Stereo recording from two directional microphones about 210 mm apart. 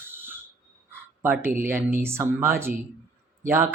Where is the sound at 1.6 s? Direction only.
10° right (ahead or behind).